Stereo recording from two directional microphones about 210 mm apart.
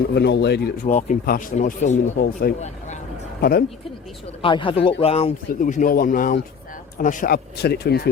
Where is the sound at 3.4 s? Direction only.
45° left (ahead or behind).